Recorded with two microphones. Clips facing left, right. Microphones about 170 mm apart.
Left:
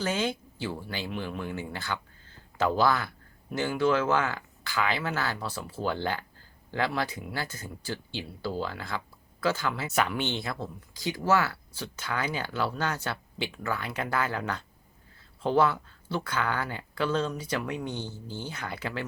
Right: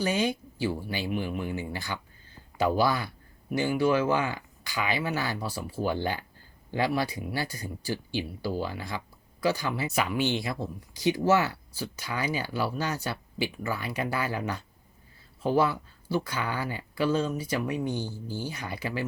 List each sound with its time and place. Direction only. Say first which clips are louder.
0.0 s speech: right 2 dB; 10° right (ahead or behind)